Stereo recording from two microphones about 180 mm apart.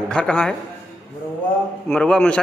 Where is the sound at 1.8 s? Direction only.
5° left (ahead or behind).